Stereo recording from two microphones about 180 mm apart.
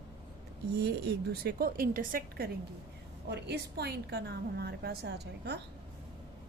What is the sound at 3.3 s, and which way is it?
A woman's voice, 65° right (ahead or behind).